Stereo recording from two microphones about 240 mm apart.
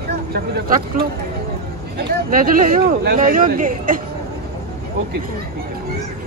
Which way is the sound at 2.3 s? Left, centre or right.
Right.